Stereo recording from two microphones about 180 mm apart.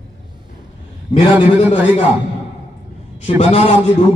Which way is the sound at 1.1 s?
30° left (ahead or behind).